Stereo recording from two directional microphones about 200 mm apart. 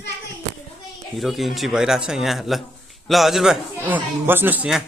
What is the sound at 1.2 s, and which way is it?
Speech, centre (ahead or behind).